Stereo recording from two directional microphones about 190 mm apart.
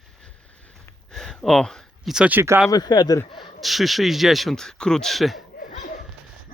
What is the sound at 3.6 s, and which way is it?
Speech, centre (ahead or behind).